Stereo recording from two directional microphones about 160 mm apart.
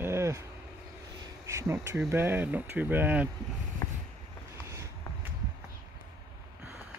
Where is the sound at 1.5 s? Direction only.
20° right (ahead or behind).